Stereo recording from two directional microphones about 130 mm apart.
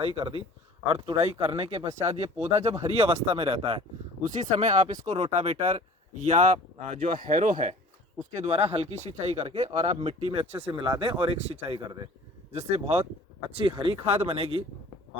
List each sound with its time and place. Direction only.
0.0 s speech: 45° right (ahead or behind)
4.2 s speech: 65° right (ahead or behind)
5.1 s speech: 50° right (ahead or behind)
7.2 s speech: 90° right
8.4 s speech: 50° right (ahead or behind)
10.7 s speech: 35° right (ahead or behind); by 13.1 s 55° right (ahead or behind)
13.5 s speech: 40° right (ahead or behind)